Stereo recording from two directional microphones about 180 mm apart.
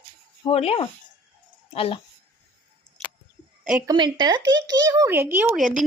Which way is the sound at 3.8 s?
25° right (ahead or behind).